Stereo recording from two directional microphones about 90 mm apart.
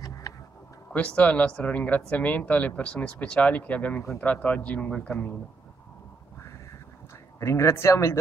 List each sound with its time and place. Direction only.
0.9 s speech: 15° left (ahead or behind)
7.3 s speech: 30° left (ahead or behind)